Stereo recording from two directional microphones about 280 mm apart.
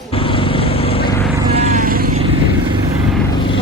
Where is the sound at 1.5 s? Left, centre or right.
Right.